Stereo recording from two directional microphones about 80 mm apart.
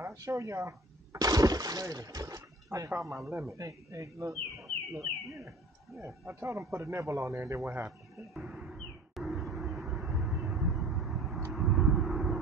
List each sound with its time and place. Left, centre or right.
0.0 s speech: right
8.4 s speech: centre
8.7 s vehicle: centre
11.5 s a sound: centre